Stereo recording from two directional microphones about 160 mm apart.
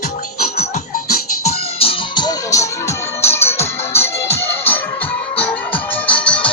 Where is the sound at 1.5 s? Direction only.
35° left (ahead or behind); by 4.8 s 15° left (ahead or behind).